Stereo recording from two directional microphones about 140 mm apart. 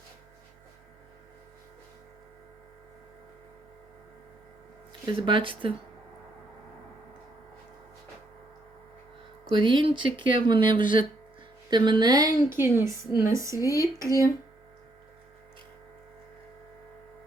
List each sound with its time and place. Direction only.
5.2 s speech: 35° right (ahead or behind)
9.5 s a woman's voice: 35° right (ahead or behind)
13.6 s speech: 25° left (ahead or behind)
14.0 s a woman's voice: 25° right (ahead or behind)